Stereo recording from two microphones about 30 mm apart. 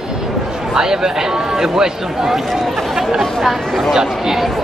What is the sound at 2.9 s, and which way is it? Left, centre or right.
Chatter, centre.